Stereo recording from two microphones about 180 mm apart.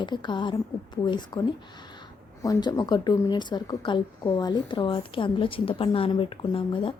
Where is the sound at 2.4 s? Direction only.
20° left (ahead or behind).